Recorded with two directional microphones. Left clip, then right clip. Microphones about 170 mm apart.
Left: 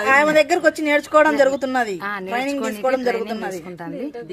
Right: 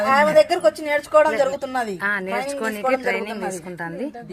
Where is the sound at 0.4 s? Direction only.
40° left (ahead or behind).